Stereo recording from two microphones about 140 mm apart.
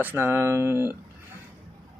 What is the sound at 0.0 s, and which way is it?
Speech, 15° right (ahead or behind).